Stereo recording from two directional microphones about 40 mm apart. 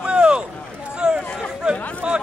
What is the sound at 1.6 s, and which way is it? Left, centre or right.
Speech, right.